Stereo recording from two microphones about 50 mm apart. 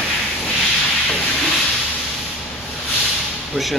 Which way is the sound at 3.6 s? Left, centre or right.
Right.